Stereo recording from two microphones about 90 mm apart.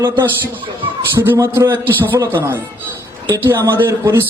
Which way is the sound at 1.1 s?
25° right (ahead or behind).